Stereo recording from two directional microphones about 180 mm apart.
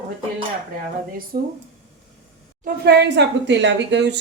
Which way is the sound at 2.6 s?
65° right (ahead or behind).